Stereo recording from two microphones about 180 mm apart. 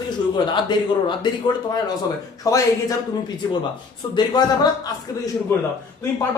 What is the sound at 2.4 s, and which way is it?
Speech, 20° left (ahead or behind).